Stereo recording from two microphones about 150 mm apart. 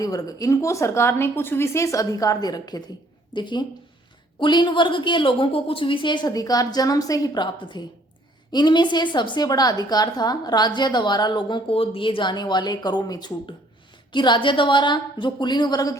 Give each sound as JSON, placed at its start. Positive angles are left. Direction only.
{"t": 0.0, "sound": "a woman's voice", "side_deg": 25}